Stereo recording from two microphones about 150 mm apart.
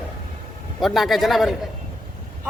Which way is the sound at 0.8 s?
Centre (ahead or behind).